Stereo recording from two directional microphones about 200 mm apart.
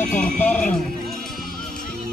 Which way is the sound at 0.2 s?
5° left (ahead or behind).